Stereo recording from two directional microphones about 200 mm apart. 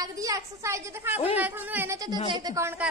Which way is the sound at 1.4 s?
10° right (ahead or behind).